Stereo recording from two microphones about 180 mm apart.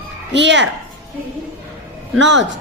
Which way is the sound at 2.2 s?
90° right.